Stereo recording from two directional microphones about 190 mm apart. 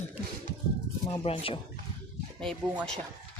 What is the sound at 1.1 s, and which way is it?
Speech, 30° left (ahead or behind).